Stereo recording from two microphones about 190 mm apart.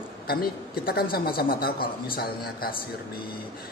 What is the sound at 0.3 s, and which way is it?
A woman's voice, 55° left (ahead or behind).